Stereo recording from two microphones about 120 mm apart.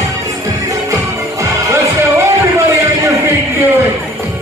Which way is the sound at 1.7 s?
25° right (ahead or behind).